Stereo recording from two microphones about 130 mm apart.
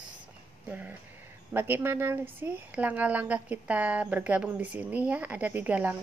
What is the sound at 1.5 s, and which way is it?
Speech, 15° right (ahead or behind).